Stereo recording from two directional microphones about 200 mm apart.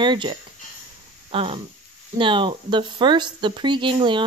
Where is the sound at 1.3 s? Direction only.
25° right (ahead or behind).